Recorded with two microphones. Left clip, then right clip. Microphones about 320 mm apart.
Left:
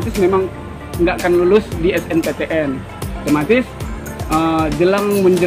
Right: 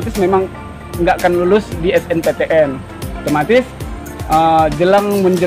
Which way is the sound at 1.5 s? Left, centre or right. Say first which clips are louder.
Right 1 dB; right.